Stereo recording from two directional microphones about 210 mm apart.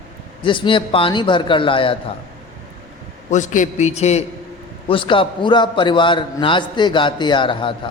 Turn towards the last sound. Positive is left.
turn(degrees=25)  # may be behind; listen again after turning